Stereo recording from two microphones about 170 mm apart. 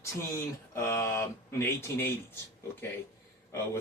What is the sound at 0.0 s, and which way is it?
Speech, 15° left (ahead or behind).